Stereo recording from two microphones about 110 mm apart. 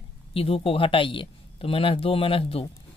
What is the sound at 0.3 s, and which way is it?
Speech, 60° left (ahead or behind).